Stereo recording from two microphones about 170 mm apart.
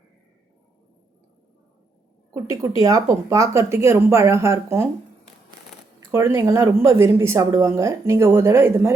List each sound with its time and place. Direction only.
2.3 s speech: 20° right (ahead or behind)
5.7 s shuffling cards: 5° left (ahead or behind)
6.1 s speech: 15° right (ahead or behind)